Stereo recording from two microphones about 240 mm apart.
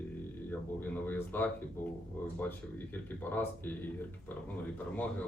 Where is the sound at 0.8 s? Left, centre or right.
Centre.